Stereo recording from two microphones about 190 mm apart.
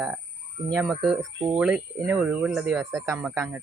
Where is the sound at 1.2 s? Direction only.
20° right (ahead or behind).